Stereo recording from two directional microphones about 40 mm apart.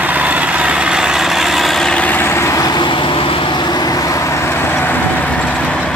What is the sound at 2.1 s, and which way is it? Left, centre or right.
Vehicle, left.